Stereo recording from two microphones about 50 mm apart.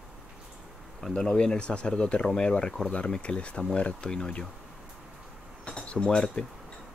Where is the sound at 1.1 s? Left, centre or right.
Centre.